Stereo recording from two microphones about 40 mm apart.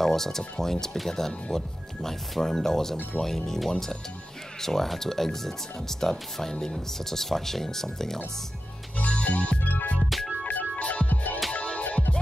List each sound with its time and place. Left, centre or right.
0.0 s speech: centre
8.9 s music: left
10.0 s music: centre
10.4 s music: left